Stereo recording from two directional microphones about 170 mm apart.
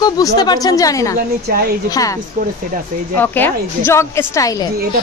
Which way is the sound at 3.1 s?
10° left (ahead or behind).